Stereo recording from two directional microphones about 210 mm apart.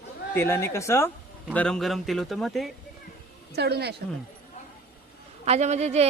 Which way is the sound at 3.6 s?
50° right (ahead or behind).